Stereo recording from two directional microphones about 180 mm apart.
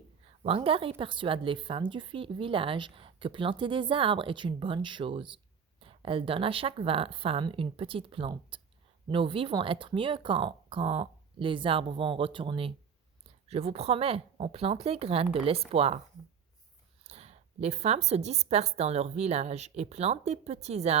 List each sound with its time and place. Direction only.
0.4 s a woman's voice: 30° right (ahead or behind)
17.1 s a woman's voice: 35° right (ahead or behind)